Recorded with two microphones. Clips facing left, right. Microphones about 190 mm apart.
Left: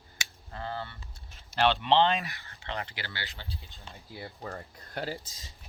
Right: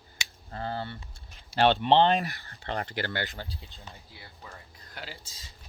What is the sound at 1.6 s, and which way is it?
Speech, 50° right (ahead or behind).